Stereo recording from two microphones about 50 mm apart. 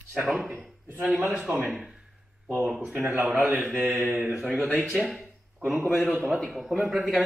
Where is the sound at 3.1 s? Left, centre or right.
Right.